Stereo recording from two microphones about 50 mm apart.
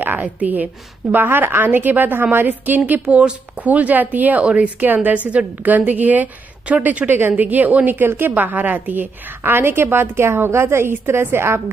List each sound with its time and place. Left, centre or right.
0.0 s a sound: right
0.4 s speech: right
2.9 s speech: right
7.2 s a woman's voice: right
7.4 s speech: right
9.4 s a woman's voice: right